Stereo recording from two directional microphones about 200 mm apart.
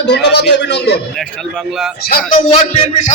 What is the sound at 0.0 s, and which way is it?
A man's voice, 60° left (ahead or behind).